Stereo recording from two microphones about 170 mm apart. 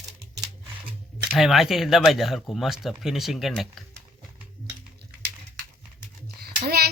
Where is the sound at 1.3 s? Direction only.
Centre (ahead or behind).